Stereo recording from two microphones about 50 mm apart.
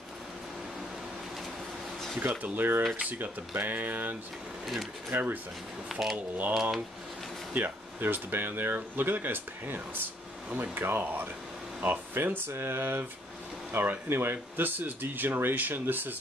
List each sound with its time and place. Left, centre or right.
2.1 s speech: right
5.9 s speech: centre
7.5 s speech: right